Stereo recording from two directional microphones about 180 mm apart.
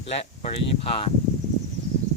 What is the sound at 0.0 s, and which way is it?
Speech, 35° left (ahead or behind).